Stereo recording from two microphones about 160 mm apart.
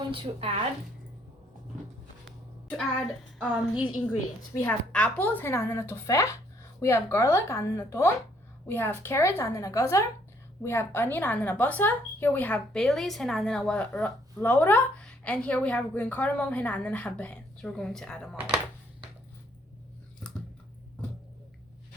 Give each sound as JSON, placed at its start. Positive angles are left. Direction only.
{"t": 0.1, "sound": "speech", "side_deg": -35}
{"t": 3.3, "sound": "a woman's voice", "side_deg": 0}
{"t": 4.6, "sound": "a woman's voice", "side_deg": 10}